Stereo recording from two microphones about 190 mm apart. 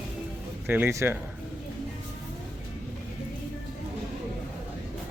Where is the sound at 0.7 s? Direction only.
10° right (ahead or behind).